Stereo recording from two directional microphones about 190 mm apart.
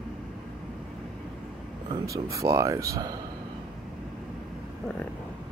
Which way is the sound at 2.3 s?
15° right (ahead or behind).